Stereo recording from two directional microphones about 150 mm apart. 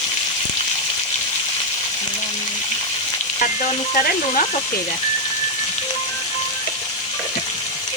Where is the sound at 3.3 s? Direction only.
60° left (ahead or behind).